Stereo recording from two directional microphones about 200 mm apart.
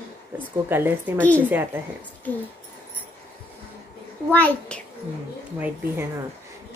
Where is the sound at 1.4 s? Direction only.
10° right (ahead or behind).